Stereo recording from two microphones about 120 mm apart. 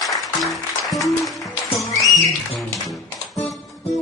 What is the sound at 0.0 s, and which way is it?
Music, centre (ahead or behind).